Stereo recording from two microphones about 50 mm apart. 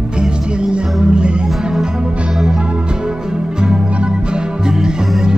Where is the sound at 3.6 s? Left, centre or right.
Centre.